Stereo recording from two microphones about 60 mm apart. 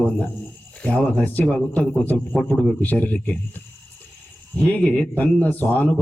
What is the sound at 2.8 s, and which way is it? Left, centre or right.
Speech, left.